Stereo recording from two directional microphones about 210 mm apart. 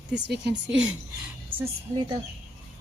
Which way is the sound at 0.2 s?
55° right (ahead or behind).